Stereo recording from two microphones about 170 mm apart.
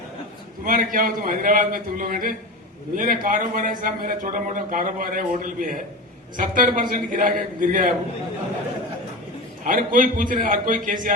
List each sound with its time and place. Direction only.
0.6 s a man's voice: 55° right (ahead or behind)
9.6 s a man's voice: 55° right (ahead or behind)